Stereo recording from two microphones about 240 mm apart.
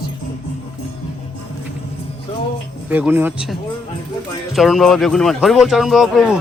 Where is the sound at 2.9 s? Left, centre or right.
Centre.